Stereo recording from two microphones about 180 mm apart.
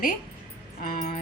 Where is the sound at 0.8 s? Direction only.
50° left (ahead or behind).